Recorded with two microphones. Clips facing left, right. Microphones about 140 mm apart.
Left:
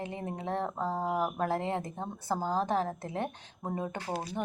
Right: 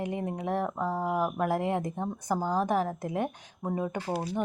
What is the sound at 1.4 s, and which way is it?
A woman's voice, 10° right (ahead or behind).